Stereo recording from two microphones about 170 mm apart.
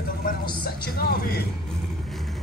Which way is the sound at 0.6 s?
65° left (ahead or behind).